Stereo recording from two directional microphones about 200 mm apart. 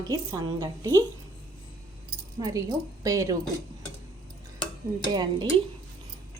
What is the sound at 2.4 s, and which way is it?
Speech, 15° right (ahead or behind).